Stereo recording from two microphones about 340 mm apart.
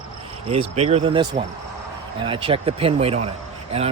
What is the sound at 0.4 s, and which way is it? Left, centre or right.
Speech, centre.